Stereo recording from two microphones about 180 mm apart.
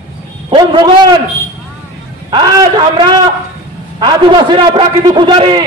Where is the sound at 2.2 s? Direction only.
25° right (ahead or behind).